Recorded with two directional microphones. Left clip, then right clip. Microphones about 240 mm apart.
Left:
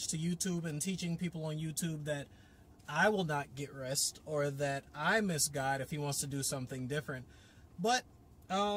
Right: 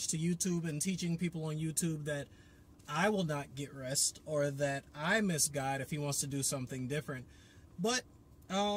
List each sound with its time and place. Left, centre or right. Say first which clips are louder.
0.1 s speech: right 2 dB; centre
8.5 s speech: left 1 dB; centre